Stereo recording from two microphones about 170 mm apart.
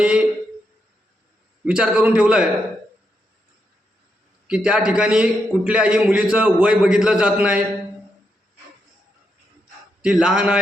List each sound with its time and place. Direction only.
0.0 s a sound: 5° right (ahead or behind)
1.6 s a man's voice: 5° right (ahead or behind)
4.4 s a man's voice: 5° right (ahead or behind)
10.0 s a man's voice: 5° right (ahead or behind)